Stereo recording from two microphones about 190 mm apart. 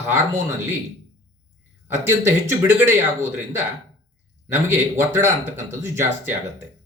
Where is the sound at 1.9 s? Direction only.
15° right (ahead or behind).